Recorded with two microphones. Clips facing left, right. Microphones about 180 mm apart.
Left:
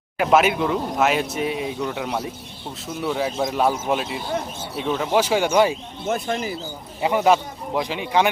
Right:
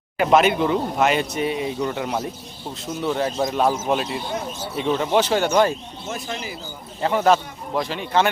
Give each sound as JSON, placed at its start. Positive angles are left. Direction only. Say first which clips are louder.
{"t": 0.2, "sound": "speech", "louder": "right 1 dB", "side_deg": 0}
{"t": 6.1, "sound": "speech", "louder": "left 6 dB", "side_deg": 55}
{"t": 7.0, "sound": "speech", "louder": "even", "side_deg": 10}